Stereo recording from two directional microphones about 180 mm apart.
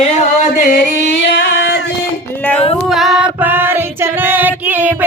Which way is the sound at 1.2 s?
80° left.